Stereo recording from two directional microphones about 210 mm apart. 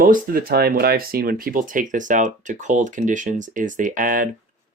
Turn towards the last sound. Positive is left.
turn(degrees=-40)  # may be behind; listen again after turning